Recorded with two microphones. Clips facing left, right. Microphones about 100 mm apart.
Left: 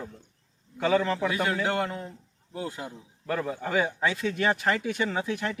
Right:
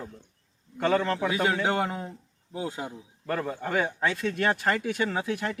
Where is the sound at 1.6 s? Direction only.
20° right (ahead or behind).